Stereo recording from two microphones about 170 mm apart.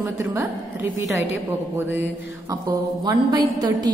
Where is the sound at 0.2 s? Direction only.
15° right (ahead or behind).